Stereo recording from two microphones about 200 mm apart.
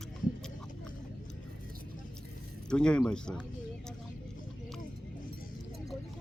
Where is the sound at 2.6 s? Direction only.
5° left (ahead or behind).